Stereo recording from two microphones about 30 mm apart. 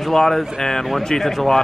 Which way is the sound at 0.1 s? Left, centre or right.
Centre.